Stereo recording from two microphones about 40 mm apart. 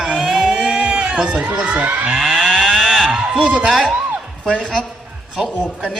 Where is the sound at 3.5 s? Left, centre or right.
Right.